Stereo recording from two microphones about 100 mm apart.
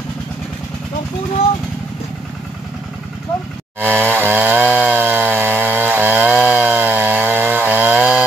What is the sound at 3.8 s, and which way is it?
Chainsaw, 20° right (ahead or behind).